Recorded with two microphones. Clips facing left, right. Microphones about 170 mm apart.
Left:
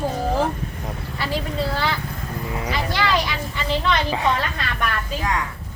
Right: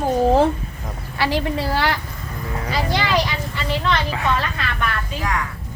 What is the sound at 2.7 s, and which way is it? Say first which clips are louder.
Speech: right 2 dB; 20° right (ahead or behind).